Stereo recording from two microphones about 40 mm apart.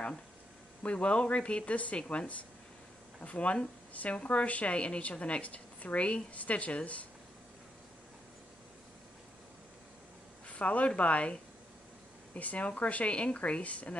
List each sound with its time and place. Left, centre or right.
0.8 s speech: left
10.5 s speech: left
12.4 s speech: left